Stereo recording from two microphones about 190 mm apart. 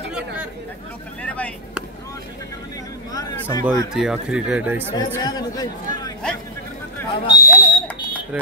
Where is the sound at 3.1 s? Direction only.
20° left (ahead or behind).